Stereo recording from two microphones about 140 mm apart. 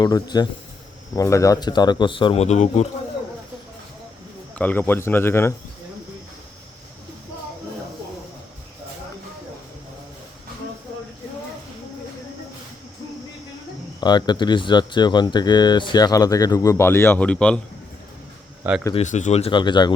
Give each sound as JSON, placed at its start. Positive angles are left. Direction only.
{"t": 0.0, "sound": "speech", "side_deg": 30}
{"t": 4.5, "sound": "speech", "side_deg": 10}
{"t": 14.0, "sound": "speech", "side_deg": 30}
{"t": 18.6, "sound": "speech", "side_deg": -15}
{"t": 19.0, "sound": "speech", "side_deg": 60}
{"t": 19.5, "sound": "speech", "side_deg": 35}